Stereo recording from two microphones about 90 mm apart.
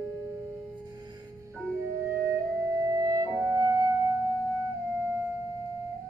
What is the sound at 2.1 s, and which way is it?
Music, 35° right (ahead or behind).